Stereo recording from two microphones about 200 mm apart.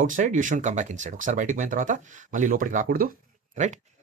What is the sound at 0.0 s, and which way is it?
Speech, 40° right (ahead or behind).